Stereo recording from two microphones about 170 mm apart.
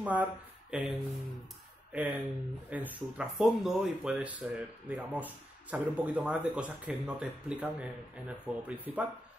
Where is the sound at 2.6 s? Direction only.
10° right (ahead or behind).